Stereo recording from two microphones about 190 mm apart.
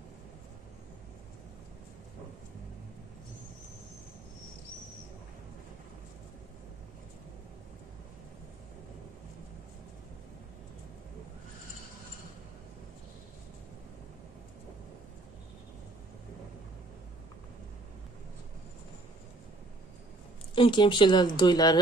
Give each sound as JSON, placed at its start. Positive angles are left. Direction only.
{"t": 20.5, "sound": "speech", "side_deg": 25}